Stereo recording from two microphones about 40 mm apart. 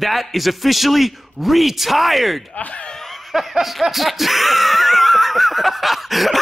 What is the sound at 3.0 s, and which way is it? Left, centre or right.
Snicker, centre.